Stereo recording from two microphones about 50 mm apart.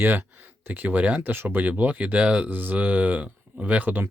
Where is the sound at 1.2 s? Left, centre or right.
Right.